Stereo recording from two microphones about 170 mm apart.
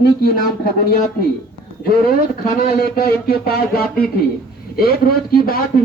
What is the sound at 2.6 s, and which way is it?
Speech, 65° left (ahead or behind).